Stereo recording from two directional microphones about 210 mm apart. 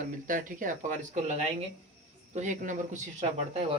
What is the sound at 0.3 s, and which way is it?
Speech, 40° right (ahead or behind).